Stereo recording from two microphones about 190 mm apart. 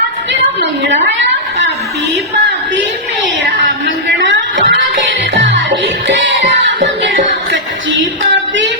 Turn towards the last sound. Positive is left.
turn(degrees=-75)  # may be behind; listen again after turning